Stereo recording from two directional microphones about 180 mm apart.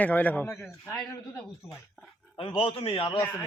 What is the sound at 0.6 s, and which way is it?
Speech, centre (ahead or behind).